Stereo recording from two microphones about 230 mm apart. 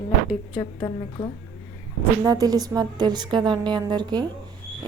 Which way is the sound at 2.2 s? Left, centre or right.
Centre.